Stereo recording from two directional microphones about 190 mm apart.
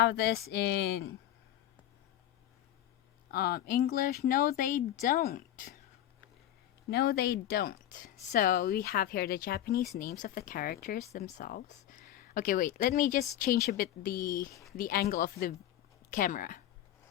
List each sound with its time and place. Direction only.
0.0 s speech: 60° left (ahead or behind)
3.3 s speech: 55° left (ahead or behind)
6.9 s speech: 55° left (ahead or behind)